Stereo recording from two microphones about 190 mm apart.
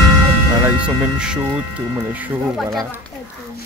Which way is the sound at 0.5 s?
10° right (ahead or behind).